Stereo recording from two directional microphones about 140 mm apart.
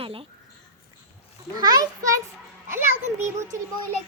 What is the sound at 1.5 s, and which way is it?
Speech, 30° right (ahead or behind).